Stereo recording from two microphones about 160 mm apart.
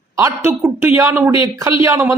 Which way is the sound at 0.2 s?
20° right (ahead or behind).